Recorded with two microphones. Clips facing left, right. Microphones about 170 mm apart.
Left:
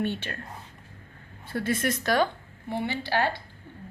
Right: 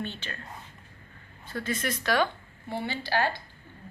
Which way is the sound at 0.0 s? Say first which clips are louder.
Left 7 dB; 60° left (ahead or behind).